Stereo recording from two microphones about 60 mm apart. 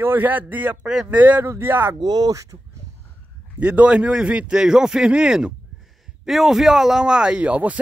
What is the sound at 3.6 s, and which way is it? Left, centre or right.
Speech, right.